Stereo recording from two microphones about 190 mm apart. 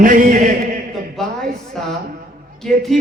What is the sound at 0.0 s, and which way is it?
Chant, 45° right (ahead or behind).